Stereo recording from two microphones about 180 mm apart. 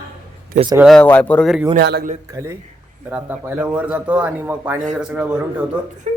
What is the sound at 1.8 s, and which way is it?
Speech, 60° right (ahead or behind).